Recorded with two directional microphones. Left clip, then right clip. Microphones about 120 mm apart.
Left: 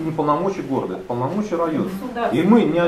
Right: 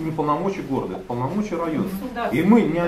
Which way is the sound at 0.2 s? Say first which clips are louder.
Left 3 dB; 15° right (ahead or behind).